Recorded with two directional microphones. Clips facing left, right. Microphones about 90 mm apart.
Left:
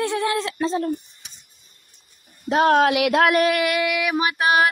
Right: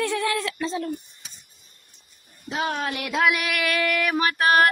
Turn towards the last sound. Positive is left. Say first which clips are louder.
# even
turn(degrees=15)  # may be behind; listen again after turning